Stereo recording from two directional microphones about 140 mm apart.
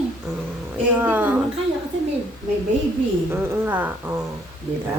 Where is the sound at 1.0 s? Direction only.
15° right (ahead or behind).